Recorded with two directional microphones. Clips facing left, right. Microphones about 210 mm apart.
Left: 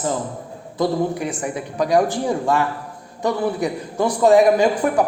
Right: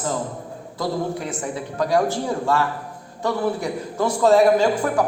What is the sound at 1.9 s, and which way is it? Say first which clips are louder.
A man's voice: left 3 dB; 15° left (ahead or behind).